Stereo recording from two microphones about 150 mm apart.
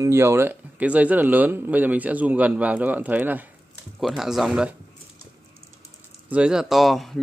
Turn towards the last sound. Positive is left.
turn(degrees=0)  # may be behind; listen again after turning